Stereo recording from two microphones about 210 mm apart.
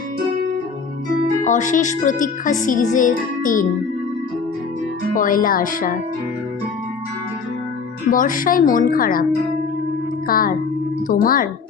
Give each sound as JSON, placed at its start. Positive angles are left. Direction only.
{"t": 1.5, "sound": "speech", "side_deg": 35}
{"t": 5.1, "sound": "speech", "side_deg": 40}
{"t": 8.1, "sound": "speech", "side_deg": 40}
{"t": 10.2, "sound": "speech", "side_deg": 45}